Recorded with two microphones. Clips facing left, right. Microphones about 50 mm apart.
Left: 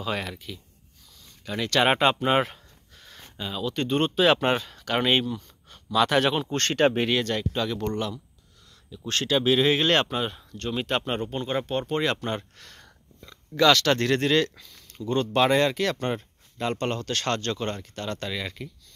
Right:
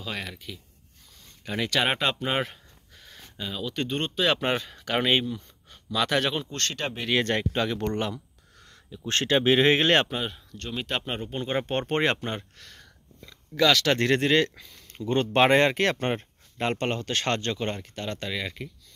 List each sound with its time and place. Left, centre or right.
0.0 s speech: centre
1.4 s speech: centre
1.8 s a sound: centre
3.3 s speech: centre
4.6 s speech: centre
6.4 s speech: left
7.2 s speech: right
10.0 s speech: centre
11.6 s speech: right
12.4 s speech: centre
13.9 s speech: centre
14.9 s speech: right; by 18.7 s centre